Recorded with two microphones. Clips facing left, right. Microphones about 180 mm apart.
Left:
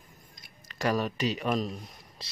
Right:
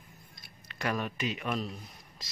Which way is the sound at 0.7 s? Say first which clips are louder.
Left 5 dB; 35° left (ahead or behind).